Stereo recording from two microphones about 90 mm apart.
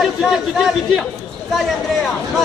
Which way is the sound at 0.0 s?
5° right (ahead or behind).